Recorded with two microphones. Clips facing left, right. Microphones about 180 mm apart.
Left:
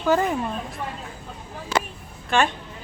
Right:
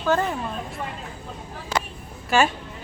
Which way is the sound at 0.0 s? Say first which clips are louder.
Left 2 dB; 10° left (ahead or behind).